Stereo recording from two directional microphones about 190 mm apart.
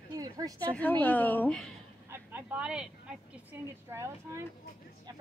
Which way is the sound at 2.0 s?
10° right (ahead or behind).